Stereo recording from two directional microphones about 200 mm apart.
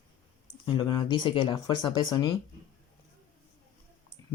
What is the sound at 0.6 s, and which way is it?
Speech, 20° left (ahead or behind).